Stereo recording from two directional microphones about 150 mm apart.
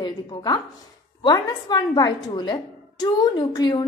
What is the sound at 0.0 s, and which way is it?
A woman's voice, 25° left (ahead or behind).